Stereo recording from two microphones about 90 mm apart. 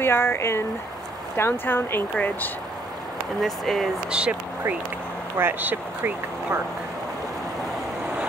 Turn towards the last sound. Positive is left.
turn(degrees=-20)  # may be behind; listen again after turning